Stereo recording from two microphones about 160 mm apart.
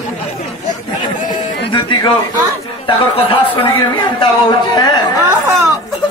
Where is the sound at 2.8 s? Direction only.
35° left (ahead or behind).